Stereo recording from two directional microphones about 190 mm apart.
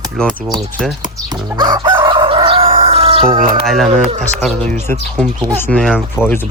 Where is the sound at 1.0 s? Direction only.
20° right (ahead or behind).